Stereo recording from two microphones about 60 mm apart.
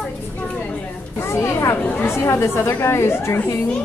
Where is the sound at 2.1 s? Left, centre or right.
Left.